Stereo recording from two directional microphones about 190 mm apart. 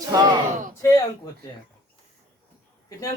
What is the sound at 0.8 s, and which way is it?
Speech, 20° left (ahead or behind).